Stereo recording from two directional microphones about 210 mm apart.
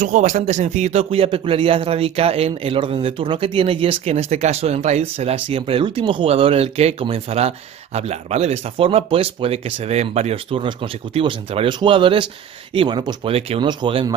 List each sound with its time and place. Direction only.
0.0 s speech: 35° right (ahead or behind)